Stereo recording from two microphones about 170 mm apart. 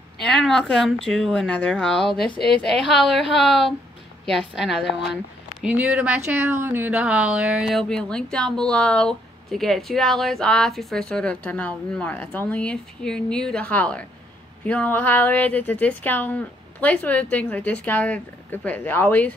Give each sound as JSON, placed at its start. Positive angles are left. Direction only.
{"t": 0.2, "sound": "speech", "side_deg": 5}